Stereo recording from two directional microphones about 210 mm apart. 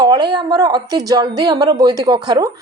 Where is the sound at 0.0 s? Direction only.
20° right (ahead or behind).